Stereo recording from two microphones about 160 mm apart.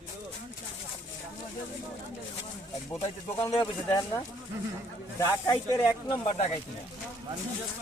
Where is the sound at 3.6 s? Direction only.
20° left (ahead or behind).